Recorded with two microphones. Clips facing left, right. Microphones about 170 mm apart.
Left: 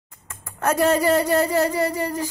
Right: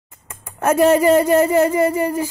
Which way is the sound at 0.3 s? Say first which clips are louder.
Right 5 dB; 15° right (ahead or behind).